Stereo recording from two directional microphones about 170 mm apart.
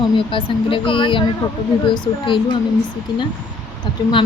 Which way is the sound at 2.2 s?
30° left (ahead or behind).